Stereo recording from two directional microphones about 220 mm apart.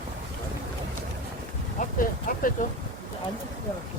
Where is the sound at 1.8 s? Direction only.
35° left (ahead or behind).